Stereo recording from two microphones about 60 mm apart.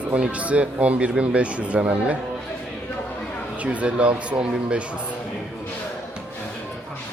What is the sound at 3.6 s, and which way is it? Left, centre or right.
Speech, centre.